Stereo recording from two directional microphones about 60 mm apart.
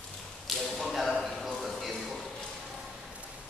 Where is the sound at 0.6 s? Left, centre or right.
Centre.